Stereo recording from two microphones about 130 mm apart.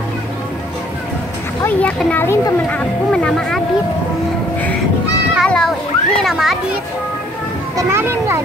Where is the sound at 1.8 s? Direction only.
10° left (ahead or behind).